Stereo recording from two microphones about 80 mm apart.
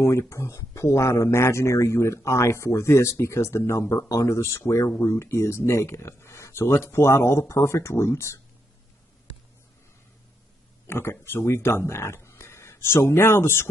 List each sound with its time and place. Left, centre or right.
0.0 s speech: left
10.9 s speech: left